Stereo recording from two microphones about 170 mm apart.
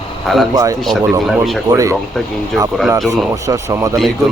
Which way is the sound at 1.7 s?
20° right (ahead or behind).